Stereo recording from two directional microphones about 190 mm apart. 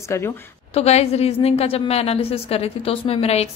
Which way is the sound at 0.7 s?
35° left (ahead or behind).